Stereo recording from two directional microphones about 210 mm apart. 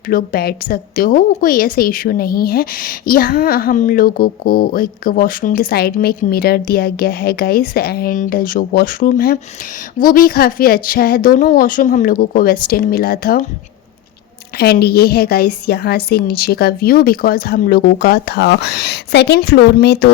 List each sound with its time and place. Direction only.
0.1 s a woman's voice: 45° left (ahead or behind)
14.6 s a woman's voice: 50° left (ahead or behind)